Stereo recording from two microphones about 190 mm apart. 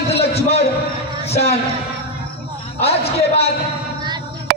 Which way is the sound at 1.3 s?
30° left (ahead or behind).